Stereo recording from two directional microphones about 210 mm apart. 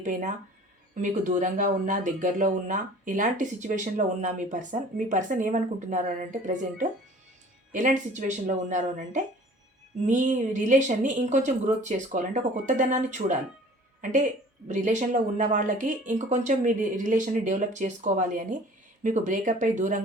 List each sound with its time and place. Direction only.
0.0 s speech: 35° right (ahead or behind)